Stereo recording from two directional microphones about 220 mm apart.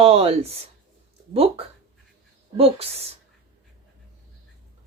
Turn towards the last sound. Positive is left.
turn(degrees=-25)  # may be behind; listen again after turning